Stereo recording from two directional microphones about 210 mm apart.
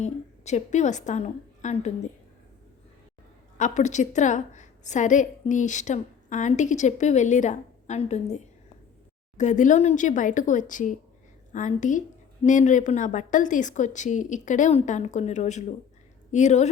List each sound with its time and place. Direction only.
0.0 s a woman's voice: 35° left (ahead or behind)
3.6 s a woman's voice: 35° left (ahead or behind)
9.4 s a woman's voice: 35° left (ahead or behind)